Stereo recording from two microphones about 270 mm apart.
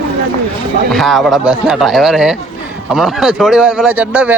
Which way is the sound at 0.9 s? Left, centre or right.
Centre.